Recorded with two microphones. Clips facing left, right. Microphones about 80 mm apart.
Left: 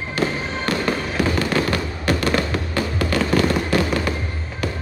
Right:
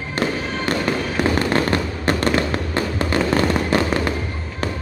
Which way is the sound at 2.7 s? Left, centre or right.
Right.